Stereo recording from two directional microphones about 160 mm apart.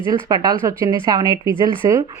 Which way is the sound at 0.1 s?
25° right (ahead or behind).